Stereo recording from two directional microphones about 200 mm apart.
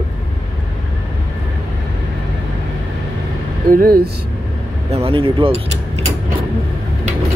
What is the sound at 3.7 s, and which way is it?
Speech, 45° right (ahead or behind).